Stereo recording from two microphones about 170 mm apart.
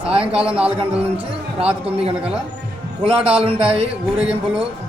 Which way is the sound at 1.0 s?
35° right (ahead or behind).